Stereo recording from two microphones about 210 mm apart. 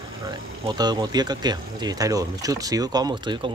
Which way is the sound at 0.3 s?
20° right (ahead or behind).